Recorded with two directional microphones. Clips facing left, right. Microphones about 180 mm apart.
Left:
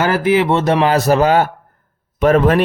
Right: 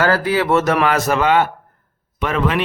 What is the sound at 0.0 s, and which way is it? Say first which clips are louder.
Speech: left 3 dB; 20° left (ahead or behind).